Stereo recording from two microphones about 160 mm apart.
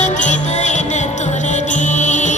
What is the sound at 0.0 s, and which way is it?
Music, 50° left (ahead or behind).